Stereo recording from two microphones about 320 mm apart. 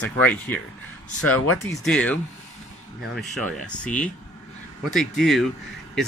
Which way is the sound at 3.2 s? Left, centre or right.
Centre.